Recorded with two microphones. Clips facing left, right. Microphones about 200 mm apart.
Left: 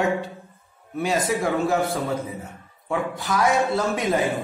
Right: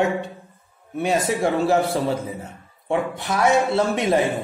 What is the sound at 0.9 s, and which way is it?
A man's voice, 25° right (ahead or behind).